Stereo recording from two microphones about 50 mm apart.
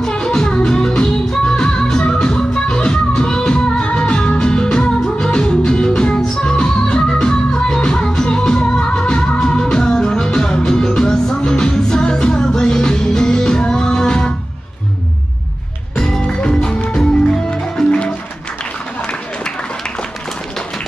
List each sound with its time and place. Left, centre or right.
0.0 s music: centre
16.0 s music: centre